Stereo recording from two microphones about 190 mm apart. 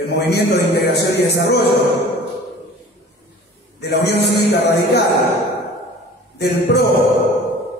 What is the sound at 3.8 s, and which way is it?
A man's voice, 60° left (ahead or behind).